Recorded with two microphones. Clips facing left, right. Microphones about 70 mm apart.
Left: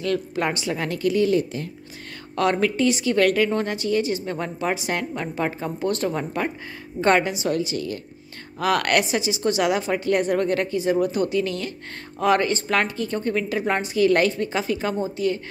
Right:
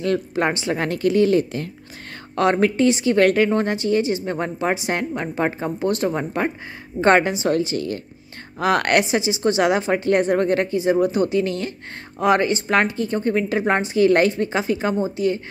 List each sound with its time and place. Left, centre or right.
0.0 s a woman's voice: right
0.7 s a woman's voice: right
2.3 s a woman's voice: right
7.0 s a woman's voice: right
8.5 s a woman's voice: right